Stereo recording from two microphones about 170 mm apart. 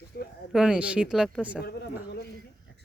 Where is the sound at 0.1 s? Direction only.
70° left (ahead or behind).